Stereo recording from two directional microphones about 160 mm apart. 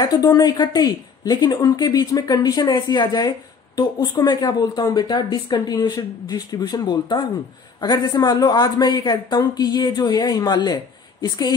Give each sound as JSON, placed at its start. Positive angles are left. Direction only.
{"t": 0.0, "sound": "a woman's voice", "side_deg": 25}